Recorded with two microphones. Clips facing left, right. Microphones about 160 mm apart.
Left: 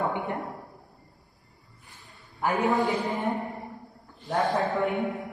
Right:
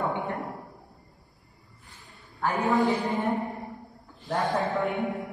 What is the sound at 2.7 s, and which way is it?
A woman's voice, centre (ahead or behind).